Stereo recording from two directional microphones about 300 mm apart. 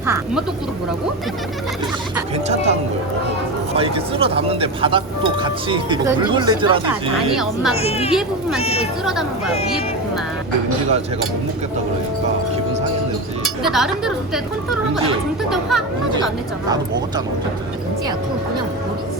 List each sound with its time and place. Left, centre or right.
0.0 s speech: centre
3.8 s speech: centre
7.8 s speech: centre
8.1 s a woman's voice: centre
8.6 s speech: centre
9.0 s a woman's voice: centre
13.7 s a woman's voice: centre